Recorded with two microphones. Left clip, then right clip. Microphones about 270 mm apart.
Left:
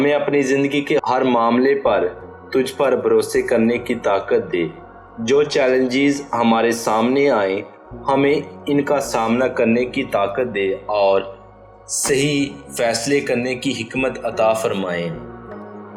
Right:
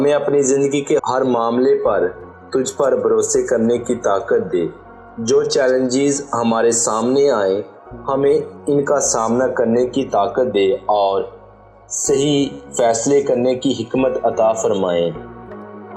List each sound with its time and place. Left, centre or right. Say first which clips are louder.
0.0 s speech: right 2 dB; centre
5.2 s speech: right 1 dB; centre; by 15.1 s right